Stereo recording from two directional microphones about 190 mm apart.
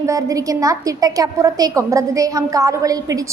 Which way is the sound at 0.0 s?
15° right (ahead or behind).